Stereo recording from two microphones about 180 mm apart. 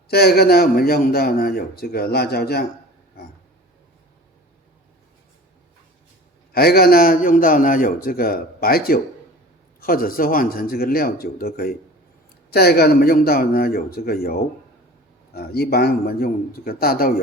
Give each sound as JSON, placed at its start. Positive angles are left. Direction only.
{"t": 0.1, "sound": "a man's voice", "side_deg": 60}
{"t": 6.5, "sound": "a man's voice", "side_deg": 60}